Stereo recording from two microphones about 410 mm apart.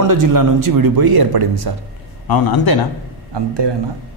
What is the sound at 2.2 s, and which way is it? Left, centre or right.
Speech, left.